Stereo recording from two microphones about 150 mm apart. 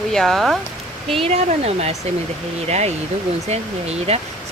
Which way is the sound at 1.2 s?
45° right (ahead or behind).